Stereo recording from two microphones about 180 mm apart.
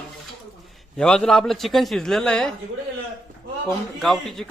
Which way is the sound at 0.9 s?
5° left (ahead or behind).